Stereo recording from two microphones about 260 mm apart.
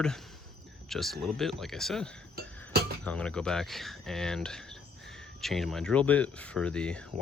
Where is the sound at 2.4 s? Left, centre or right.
Right.